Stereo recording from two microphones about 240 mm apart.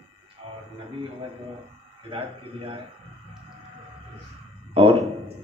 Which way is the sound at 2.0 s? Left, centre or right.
Right.